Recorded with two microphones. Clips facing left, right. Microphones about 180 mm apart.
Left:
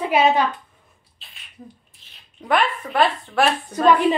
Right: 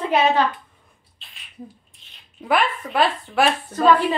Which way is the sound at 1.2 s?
Centre (ahead or behind).